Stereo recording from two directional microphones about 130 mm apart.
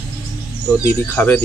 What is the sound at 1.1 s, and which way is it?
Speech, 15° left (ahead or behind).